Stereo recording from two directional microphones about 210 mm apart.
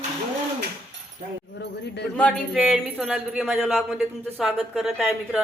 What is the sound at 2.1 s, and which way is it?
Speech, 5° left (ahead or behind).